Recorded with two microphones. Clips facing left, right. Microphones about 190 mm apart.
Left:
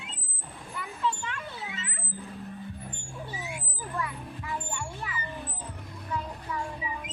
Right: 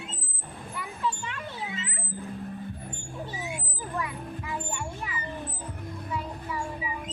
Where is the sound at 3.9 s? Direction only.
20° right (ahead or behind).